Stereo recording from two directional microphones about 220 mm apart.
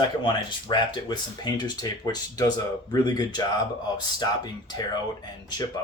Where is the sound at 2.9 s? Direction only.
15° left (ahead or behind).